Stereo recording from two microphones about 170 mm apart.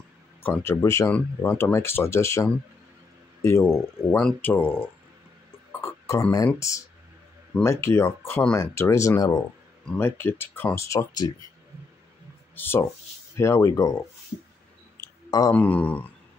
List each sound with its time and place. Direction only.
0.4 s speech: 10° left (ahead or behind)
12.5 s speech: 15° left (ahead or behind)
15.0 s a sound: 20° left (ahead or behind)
15.5 s speech: 10° left (ahead or behind)